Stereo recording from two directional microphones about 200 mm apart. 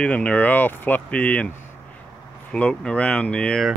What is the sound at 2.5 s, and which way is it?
Speech, 5° left (ahead or behind).